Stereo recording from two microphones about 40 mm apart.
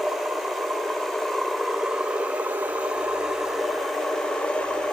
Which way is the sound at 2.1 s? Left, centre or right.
Right.